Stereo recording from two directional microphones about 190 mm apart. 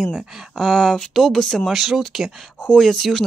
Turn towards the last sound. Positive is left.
turn(degrees=0)  # may be behind; listen again after turning